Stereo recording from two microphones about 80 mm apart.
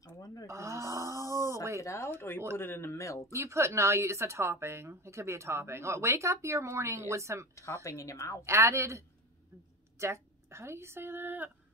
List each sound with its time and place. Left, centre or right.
0.0 s a sound: left
0.5 s snoring: right
1.8 s speech: left
2.1 s speech: left
3.3 s a woman's voice: right
7.8 s speech: left
8.5 s a woman's voice: right